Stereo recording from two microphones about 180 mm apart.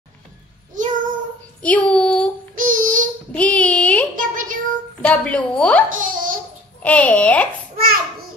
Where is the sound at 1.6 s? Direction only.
5° left (ahead or behind).